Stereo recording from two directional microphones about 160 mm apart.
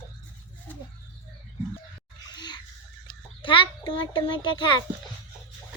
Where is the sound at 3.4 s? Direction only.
30° left (ahead or behind).